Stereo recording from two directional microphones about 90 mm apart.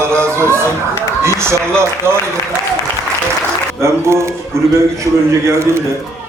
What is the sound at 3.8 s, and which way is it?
A man's voice, 30° right (ahead or behind).